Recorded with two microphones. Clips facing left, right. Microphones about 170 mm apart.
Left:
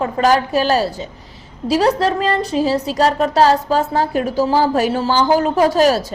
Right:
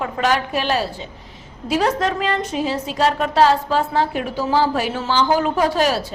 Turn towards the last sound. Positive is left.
turn(degrees=40)  # may be behind; listen again after turning